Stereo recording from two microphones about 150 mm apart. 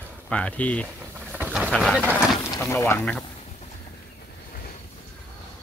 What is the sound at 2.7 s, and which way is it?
Speech, 20° left (ahead or behind).